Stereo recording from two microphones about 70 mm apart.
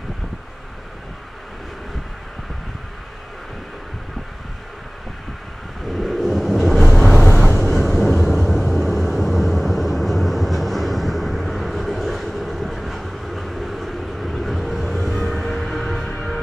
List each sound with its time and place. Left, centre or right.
5.9 s vehicle: centre
7.4 s vehicle: left
8.0 s vehicle: centre